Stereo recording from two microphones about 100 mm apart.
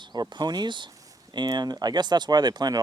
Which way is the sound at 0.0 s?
45° right (ahead or behind).